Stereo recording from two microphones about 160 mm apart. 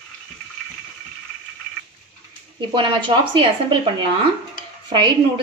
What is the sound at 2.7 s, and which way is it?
Speech, 30° right (ahead or behind).